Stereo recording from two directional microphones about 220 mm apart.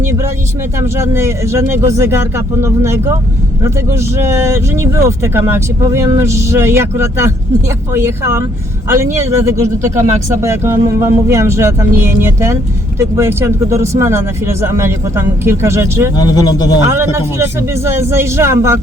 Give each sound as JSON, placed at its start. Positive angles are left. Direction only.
{"t": 0.0, "sound": "a sound", "side_deg": -10}
{"t": 0.8, "sound": "speech", "side_deg": -10}
{"t": 9.9, "sound": "speech", "side_deg": -35}
{"t": 10.4, "sound": "speech", "side_deg": -10}
{"t": 16.1, "sound": "speech", "side_deg": 15}
{"t": 16.9, "sound": "speech", "side_deg": -10}